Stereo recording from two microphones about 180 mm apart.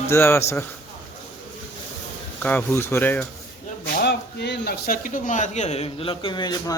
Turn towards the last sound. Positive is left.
turn(degrees=25)  # may be behind; listen again after turning